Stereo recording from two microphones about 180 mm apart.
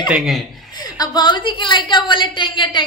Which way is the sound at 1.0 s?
20° left (ahead or behind).